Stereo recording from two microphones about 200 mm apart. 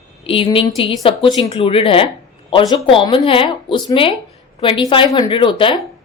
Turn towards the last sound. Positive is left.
turn(degrees=25)  # may be behind; listen again after turning